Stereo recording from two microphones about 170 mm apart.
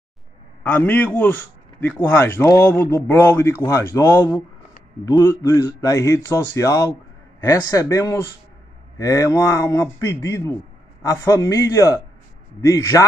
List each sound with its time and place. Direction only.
0.7 s a man's voice: 10° left (ahead or behind)